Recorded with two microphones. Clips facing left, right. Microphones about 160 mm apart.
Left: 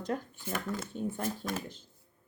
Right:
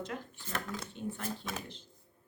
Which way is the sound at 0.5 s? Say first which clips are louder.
Left 3 dB; 5° left (ahead or behind).